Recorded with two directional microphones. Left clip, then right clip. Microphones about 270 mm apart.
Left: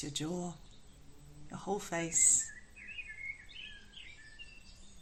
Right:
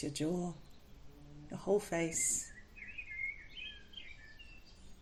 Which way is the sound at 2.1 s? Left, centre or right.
Left.